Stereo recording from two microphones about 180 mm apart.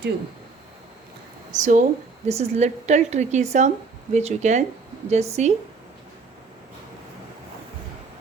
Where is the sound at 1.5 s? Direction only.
45° right (ahead or behind).